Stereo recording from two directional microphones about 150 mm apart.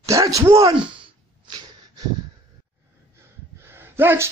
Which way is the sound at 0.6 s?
35° right (ahead or behind).